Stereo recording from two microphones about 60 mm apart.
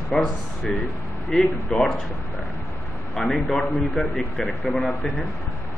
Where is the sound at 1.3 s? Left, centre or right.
Centre.